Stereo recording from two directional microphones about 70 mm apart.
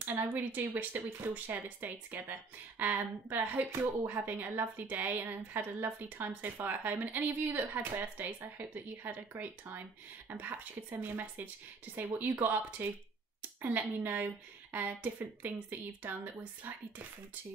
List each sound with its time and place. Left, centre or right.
0.0 s speech: right